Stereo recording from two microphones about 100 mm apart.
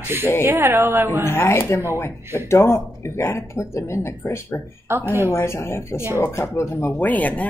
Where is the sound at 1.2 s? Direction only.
25° left (ahead or behind).